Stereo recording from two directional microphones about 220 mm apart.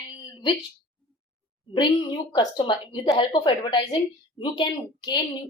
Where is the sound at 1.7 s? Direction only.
20° left (ahead or behind).